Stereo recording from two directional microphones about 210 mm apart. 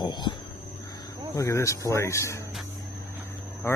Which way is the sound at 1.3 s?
15° left (ahead or behind).